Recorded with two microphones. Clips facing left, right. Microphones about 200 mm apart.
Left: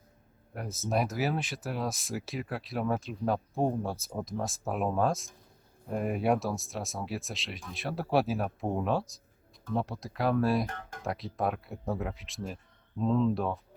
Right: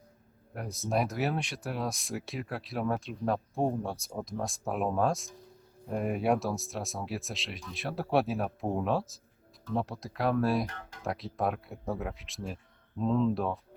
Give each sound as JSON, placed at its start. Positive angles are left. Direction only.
{"t": 0.5, "sound": "speech", "side_deg": 0}
{"t": 10.7, "sound": "music", "side_deg": 50}
{"t": 11.0, "sound": "speech", "side_deg": 0}